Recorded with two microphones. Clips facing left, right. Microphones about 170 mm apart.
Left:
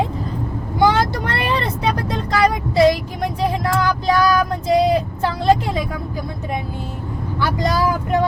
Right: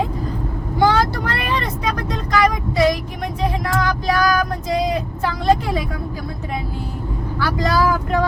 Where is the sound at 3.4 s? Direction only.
30° left (ahead or behind).